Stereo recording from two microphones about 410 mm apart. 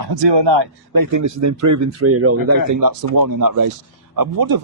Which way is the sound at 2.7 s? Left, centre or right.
Right.